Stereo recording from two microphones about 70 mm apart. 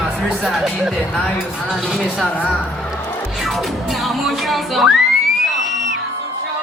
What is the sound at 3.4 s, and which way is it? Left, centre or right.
Speech, centre.